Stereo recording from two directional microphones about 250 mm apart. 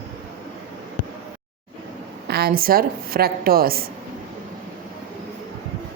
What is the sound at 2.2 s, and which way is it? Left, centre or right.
A woman's voice, right.